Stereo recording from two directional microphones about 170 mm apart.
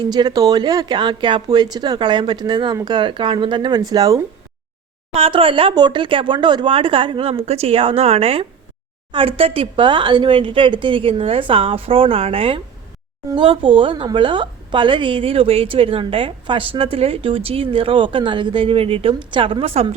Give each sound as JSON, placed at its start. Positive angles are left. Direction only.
{"t": 0.0, "sound": "speech", "side_deg": -25}
{"t": 5.1, "sound": "speech", "side_deg": -35}